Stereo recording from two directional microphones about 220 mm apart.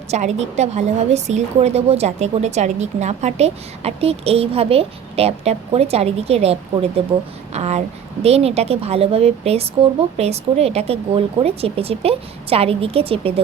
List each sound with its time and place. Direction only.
0.1 s a woman's voice: 30° right (ahead or behind)